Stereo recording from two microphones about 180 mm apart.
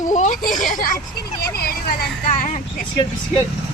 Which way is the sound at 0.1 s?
45° left (ahead or behind).